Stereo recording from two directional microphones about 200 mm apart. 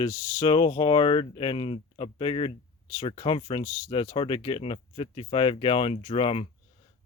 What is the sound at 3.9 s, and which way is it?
Speech, 25° left (ahead or behind).